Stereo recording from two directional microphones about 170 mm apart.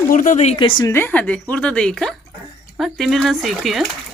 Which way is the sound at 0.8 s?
15° left (ahead or behind).